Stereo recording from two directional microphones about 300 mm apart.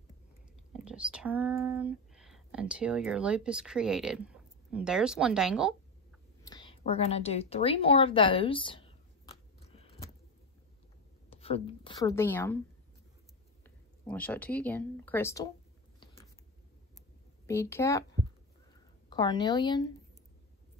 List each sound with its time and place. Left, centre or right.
0.8 s speech: centre
6.4 s a sound: centre
11.2 s a woman's voice: centre
14.0 s speech: centre
17.5 s a woman's voice: centre